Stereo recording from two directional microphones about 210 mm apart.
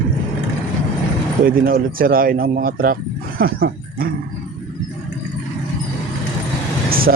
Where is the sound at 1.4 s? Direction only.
45° right (ahead or behind).